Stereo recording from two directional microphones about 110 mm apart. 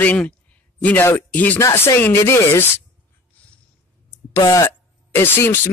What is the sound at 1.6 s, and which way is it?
Speech, 30° left (ahead or behind).